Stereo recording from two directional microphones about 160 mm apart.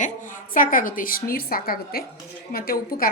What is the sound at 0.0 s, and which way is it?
A woman's voice, 55° left (ahead or behind).